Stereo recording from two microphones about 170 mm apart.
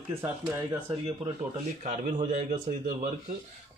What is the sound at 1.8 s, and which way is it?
A man's voice, 45° right (ahead or behind).